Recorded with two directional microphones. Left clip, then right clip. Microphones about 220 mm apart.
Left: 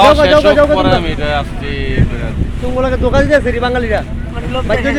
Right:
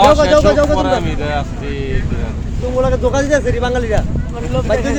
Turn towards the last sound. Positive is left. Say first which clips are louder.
# left 1 dB
turn(degrees=40)  # may be behind; listen again after turning